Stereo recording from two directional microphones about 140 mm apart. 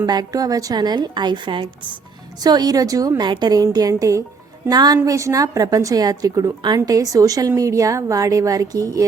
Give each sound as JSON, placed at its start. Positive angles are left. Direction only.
{"t": 0.0, "sound": "a woman's voice", "side_deg": -30}